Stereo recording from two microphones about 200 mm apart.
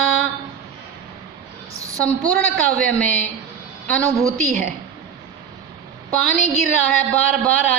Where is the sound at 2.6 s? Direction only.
5° left (ahead or behind).